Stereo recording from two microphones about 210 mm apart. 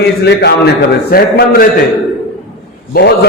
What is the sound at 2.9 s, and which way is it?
Speech, 50° left (ahead or behind).